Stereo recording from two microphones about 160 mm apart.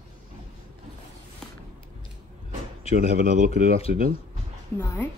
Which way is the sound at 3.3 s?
55° right (ahead or behind).